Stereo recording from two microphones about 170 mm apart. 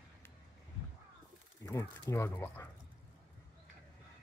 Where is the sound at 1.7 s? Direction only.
15° left (ahead or behind).